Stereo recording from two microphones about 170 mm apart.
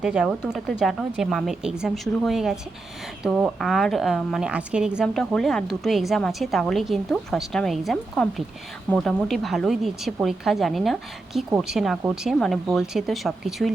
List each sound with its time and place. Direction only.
0.0 s a woman's voice: 5° right (ahead or behind)